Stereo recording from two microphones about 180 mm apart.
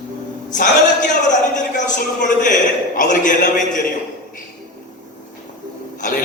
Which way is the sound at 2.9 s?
45° left (ahead or behind).